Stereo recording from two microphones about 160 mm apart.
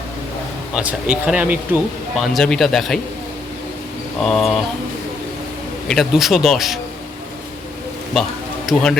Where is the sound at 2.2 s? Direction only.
Centre (ahead or behind).